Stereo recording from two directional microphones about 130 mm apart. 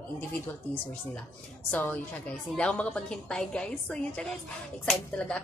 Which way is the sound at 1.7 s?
15° left (ahead or behind).